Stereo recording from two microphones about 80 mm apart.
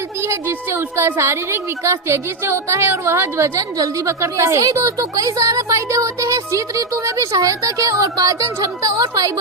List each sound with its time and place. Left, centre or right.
0.2 s a child's voice: right